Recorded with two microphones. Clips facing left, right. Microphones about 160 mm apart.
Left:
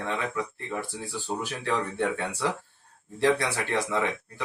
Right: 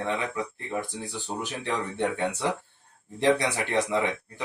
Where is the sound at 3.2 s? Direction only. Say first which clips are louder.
Right 1 dB; 20° right (ahead or behind).